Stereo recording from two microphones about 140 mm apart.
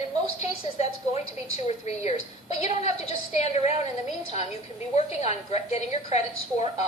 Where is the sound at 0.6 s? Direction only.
50° left (ahead or behind).